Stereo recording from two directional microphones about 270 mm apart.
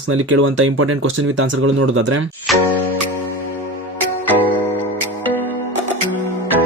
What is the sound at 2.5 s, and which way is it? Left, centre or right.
Music, centre.